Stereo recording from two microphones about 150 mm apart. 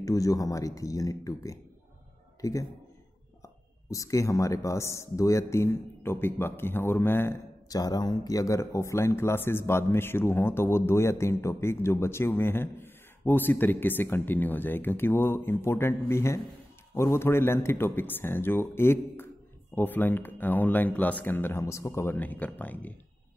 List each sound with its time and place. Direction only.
0.0 s speech: 25° left (ahead or behind)